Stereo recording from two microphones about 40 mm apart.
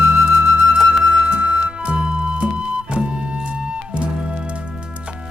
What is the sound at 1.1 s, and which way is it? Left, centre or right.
Music, right.